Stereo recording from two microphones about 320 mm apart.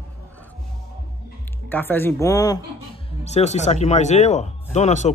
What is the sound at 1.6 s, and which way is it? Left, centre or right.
Speech, centre.